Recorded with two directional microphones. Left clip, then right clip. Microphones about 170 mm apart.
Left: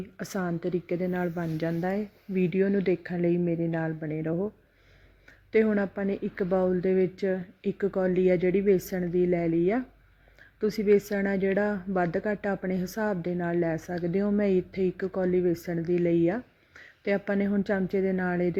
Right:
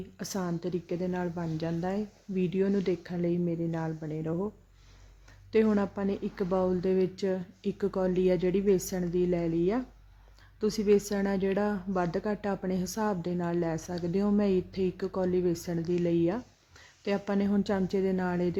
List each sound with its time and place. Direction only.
0.2 s speech: 20° left (ahead or behind)
5.5 s a woman's voice: 15° left (ahead or behind)